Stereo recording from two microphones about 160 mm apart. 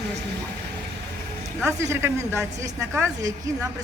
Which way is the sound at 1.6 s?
15° right (ahead or behind).